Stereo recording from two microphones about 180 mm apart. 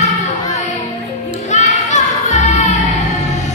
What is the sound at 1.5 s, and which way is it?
Music, 40° left (ahead or behind).